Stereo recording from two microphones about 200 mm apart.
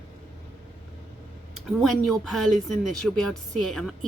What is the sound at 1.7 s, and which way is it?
A woman's voice, centre (ahead or behind).